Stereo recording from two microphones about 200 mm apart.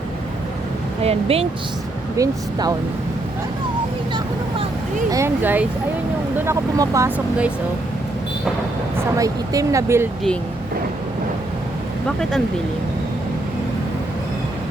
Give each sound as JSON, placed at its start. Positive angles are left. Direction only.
{"t": 1.0, "sound": "speech", "side_deg": -30}
{"t": 2.1, "sound": "speech", "side_deg": -15}
{"t": 5.1, "sound": "speech", "side_deg": -10}
{"t": 9.1, "sound": "speech", "side_deg": -15}